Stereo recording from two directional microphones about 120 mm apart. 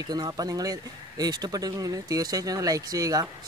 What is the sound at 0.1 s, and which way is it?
Speech, 30° right (ahead or behind).